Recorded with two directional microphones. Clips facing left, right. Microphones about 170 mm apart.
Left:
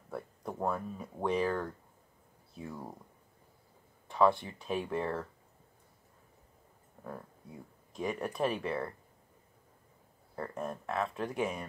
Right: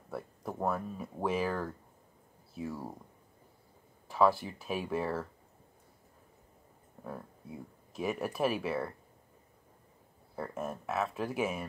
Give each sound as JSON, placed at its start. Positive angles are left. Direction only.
{"t": 0.1, "sound": "speech", "side_deg": 0}
{"t": 4.1, "sound": "speech", "side_deg": -5}
{"t": 7.9, "sound": "speech", "side_deg": -5}
{"t": 10.3, "sound": "speech", "side_deg": -5}